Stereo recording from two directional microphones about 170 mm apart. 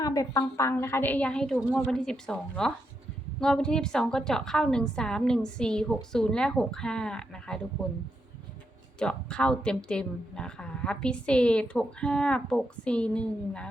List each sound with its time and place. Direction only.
0.0 s a woman's voice: 20° left (ahead or behind); by 7.9 s 5° left (ahead or behind)
9.0 s a woman's voice: 5° left (ahead or behind)